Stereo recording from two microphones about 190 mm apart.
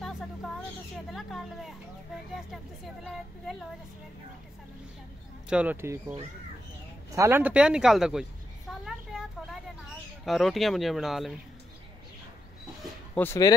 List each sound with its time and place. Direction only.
1.1 s speech: centre (ahead or behind)
5.5 s speech: 10° right (ahead or behind)
8.8 s a sound: centre (ahead or behind)
10.2 s speech: centre (ahead or behind)
13.1 s speech: 10° left (ahead or behind)